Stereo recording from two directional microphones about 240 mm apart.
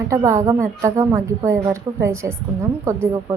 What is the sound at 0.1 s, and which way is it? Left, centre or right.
A woman's voice, centre.